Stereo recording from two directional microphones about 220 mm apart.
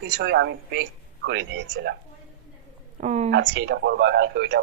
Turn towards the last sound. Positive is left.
turn(degrees=-50)  # may be behind; listen again after turning